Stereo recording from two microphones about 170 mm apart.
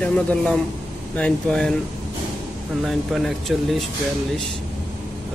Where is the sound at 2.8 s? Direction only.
Centre (ahead or behind).